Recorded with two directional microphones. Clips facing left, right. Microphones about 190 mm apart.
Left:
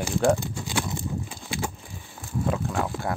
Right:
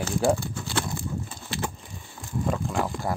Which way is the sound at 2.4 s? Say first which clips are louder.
Even; centre (ahead or behind).